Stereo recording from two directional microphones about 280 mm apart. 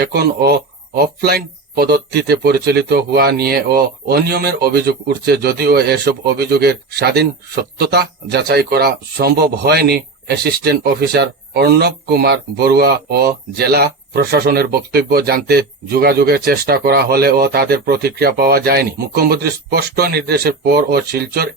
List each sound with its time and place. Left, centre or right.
0.0 s speech: right